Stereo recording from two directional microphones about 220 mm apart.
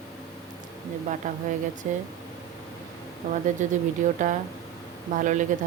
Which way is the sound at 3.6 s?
35° right (ahead or behind).